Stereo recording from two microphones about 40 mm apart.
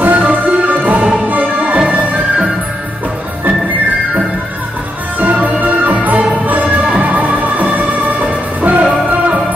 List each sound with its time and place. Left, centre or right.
0.0 s music: right
5.2 s music: right